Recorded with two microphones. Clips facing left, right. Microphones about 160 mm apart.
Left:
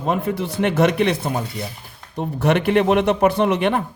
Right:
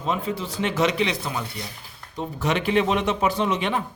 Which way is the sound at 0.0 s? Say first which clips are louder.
Left 5 dB; 55° left (ahead or behind).